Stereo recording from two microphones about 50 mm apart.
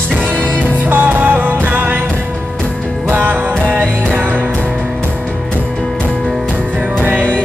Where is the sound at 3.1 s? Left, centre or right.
Right.